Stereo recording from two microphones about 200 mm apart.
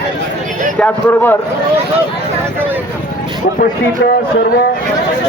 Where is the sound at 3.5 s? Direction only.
45° left (ahead or behind).